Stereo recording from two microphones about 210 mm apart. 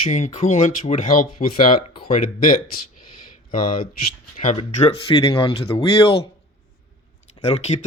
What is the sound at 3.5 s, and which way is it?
Speech, 40° left (ahead or behind).